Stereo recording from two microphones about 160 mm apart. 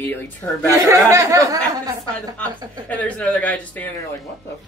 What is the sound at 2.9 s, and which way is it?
Speech, 10° left (ahead or behind).